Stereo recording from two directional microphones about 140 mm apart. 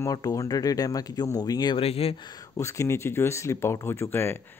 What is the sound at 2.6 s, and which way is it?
Speech, 20° left (ahead or behind).